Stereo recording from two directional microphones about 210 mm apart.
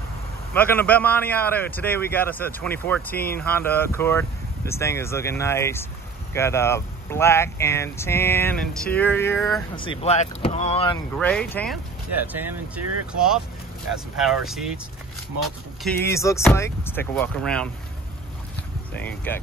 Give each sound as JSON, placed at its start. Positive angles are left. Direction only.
{"t": 0.6, "sound": "a man's voice", "side_deg": 10}
{"t": 9.8, "sound": "speech", "side_deg": 25}
{"t": 11.1, "sound": "speech", "side_deg": 5}
{"t": 12.3, "sound": "speech", "side_deg": -5}
{"t": 15.8, "sound": "a man's voice", "side_deg": 10}
{"t": 18.9, "sound": "a man's voice", "side_deg": 10}